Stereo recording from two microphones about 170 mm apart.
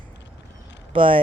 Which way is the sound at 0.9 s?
30° right (ahead or behind).